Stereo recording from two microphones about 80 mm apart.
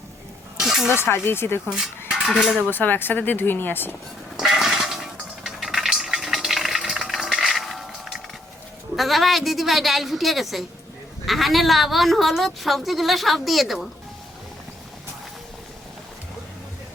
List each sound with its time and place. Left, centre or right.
0.6 s snake: centre
0.9 s speech: left
1.7 s dishes: centre
2.6 s speech: left
4.4 s music: centre
9.0 s a woman's voice: centre